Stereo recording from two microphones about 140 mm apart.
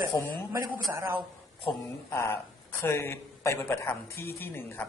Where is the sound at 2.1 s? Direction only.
20° left (ahead or behind).